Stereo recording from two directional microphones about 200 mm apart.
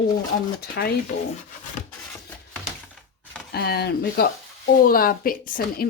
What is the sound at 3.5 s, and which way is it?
Speech, 50° left (ahead or behind).